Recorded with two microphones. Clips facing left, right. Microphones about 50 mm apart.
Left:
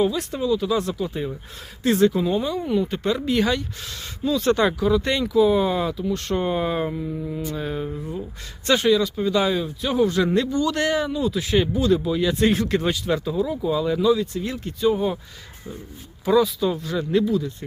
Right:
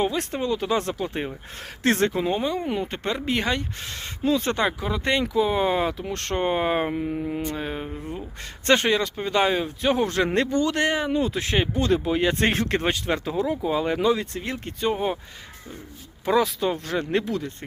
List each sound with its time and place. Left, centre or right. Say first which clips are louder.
0.0 s speech: left 2 dB; right
2.1 s speech: left 2 dB; right
7.5 s speech: left 3 dB; right
11.7 s speech: left 2 dB; right
13.6 s speech: left 1 dB; right
13.8 s speech: left 4 dB; right
14.9 s speech: left 2 dB; right
16.2 s speech: left 3 dB; right